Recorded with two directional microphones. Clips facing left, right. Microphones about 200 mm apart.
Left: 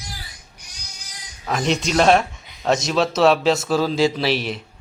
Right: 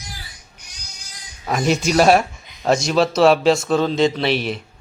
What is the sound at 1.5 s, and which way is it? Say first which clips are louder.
Speech: right 3 dB; 5° right (ahead or behind).